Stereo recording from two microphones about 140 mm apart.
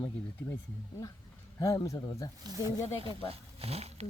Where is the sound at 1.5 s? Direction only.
25° left (ahead or behind).